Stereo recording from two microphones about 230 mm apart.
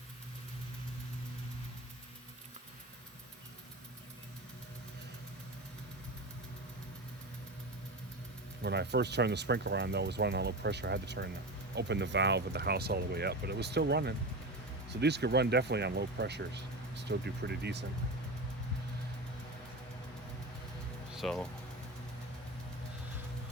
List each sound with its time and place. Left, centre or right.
8.6 s speech: right
21.1 s music: centre